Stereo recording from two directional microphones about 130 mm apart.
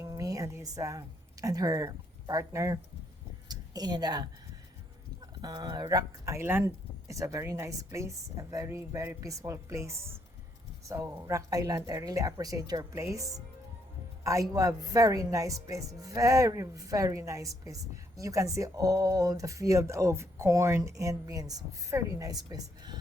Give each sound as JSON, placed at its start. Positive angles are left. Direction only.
{"t": 0.0, "sound": "a woman's voice", "side_deg": -25}
{"t": 5.4, "sound": "a woman's voice", "side_deg": -30}